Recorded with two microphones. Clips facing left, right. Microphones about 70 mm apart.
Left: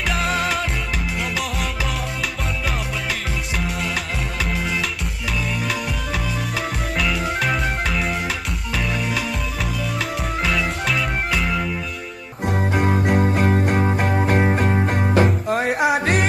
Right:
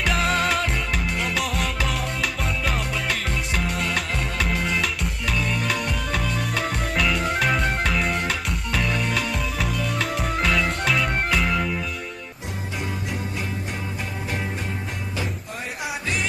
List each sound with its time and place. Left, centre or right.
0.1 s music: centre
4.5 s music: centre
7.0 s music: centre
10.4 s music: centre
12.7 s music: left